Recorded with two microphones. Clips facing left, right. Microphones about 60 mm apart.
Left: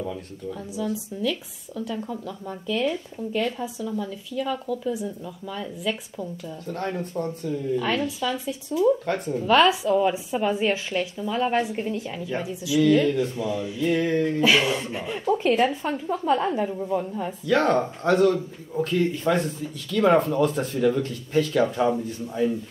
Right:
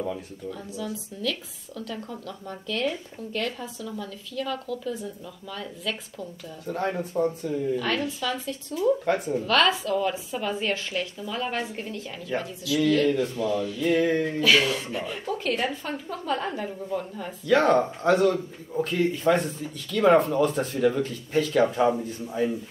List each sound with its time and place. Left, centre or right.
0.5 s speech: centre
6.6 s speech: centre
7.7 s speech: centre
9.0 s speech: centre
9.4 s speech: centre
10.9 s speech: centre
11.3 s speech: centre
13.8 s speech: centre
14.4 s speech: centre
15.0 s a woman's voice: centre
17.5 s speech: centre